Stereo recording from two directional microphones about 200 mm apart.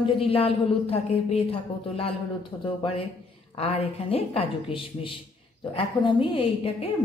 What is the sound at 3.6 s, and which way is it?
Speech, 30° left (ahead or behind).